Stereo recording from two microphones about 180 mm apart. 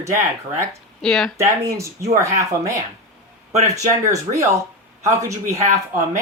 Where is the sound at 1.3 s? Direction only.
15° right (ahead or behind).